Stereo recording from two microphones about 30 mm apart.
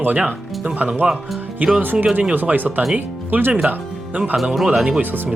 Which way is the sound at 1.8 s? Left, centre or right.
Right.